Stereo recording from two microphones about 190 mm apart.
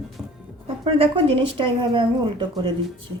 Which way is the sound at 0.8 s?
30° right (ahead or behind).